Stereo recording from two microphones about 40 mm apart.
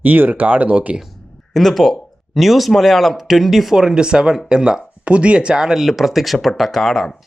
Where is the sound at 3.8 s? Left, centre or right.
Centre.